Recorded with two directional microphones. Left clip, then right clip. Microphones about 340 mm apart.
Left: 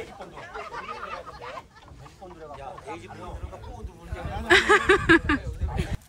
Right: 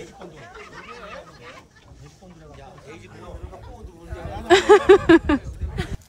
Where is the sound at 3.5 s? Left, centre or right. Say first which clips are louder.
Even; centre.